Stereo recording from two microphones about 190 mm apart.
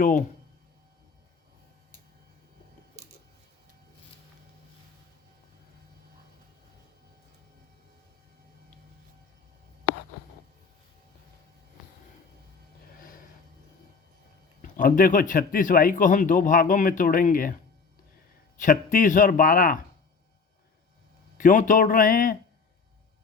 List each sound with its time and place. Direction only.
0.0 s speech: 45° left (ahead or behind)
13.0 s a sound: 45° left (ahead or behind)
14.6 s speech: 45° left (ahead or behind)
18.6 s speech: 45° left (ahead or behind)
21.3 s speech: 45° left (ahead or behind)